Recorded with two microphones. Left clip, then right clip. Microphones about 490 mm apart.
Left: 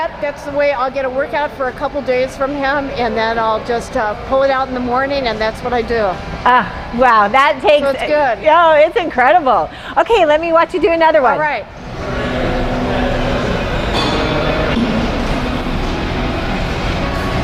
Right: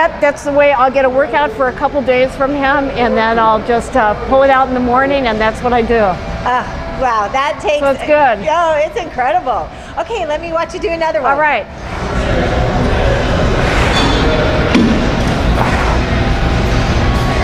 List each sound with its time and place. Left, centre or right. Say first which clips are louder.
0.0 s a woman's voice: right 8 dB; right
6.4 s a woman's voice: left 5 dB; left
7.9 s speech: right 3 dB; centre
8.4 s a woman's voice: left 4 dB; left
10.0 s a woman's voice: left 6 dB; left
11.3 s a woman's voice: right 4 dB; right